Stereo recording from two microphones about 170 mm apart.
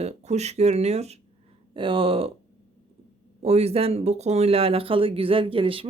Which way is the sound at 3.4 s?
40° right (ahead or behind).